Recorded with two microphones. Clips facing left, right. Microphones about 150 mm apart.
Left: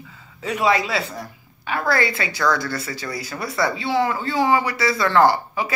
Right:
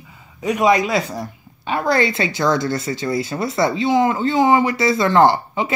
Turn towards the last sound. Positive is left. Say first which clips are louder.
# right 2 dB
turn(degrees=-25)  # may be behind; listen again after turning